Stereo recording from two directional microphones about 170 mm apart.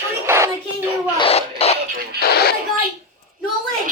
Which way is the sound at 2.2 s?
70° left (ahead or behind).